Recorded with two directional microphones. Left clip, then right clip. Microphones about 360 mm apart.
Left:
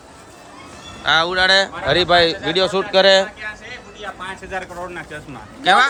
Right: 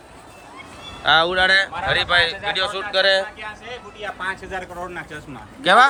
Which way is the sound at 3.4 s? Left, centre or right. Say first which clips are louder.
Left 2 dB; centre.